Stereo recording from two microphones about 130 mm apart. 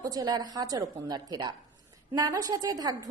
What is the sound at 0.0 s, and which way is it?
A woman's voice, 30° right (ahead or behind).